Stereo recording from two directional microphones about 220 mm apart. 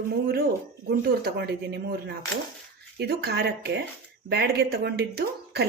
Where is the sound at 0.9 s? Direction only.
45° right (ahead or behind).